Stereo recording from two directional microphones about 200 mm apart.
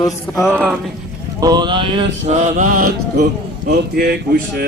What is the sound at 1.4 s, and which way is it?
Mantra, 20° right (ahead or behind).